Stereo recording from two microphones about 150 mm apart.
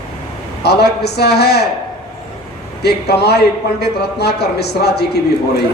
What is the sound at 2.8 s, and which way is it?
Speech, 90° left.